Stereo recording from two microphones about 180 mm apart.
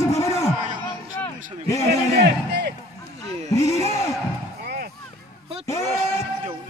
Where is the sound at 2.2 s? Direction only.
65° right (ahead or behind).